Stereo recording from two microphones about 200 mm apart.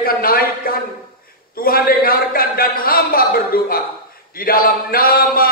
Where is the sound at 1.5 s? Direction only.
45° left (ahead or behind).